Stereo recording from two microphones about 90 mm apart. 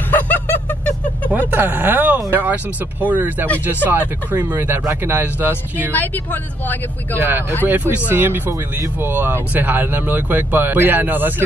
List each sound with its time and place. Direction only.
0.1 s a sound: 20° left (ahead or behind)
1.3 s speech: 20° right (ahead or behind)
5.9 s speech: 20° left (ahead or behind)
7.2 s speech: 20° right (ahead or behind)